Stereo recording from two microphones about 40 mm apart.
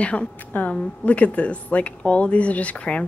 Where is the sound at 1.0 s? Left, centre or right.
Left.